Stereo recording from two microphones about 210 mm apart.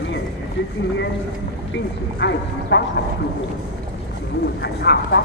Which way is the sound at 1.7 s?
55° left (ahead or behind).